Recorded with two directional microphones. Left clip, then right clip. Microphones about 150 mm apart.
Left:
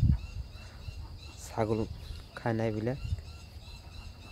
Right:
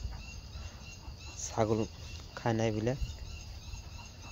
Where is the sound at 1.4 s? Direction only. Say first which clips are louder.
Right 1 dB; 10° left (ahead or behind).